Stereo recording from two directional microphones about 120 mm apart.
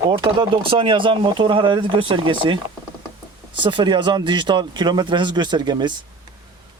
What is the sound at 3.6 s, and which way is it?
Speech, 40° right (ahead or behind).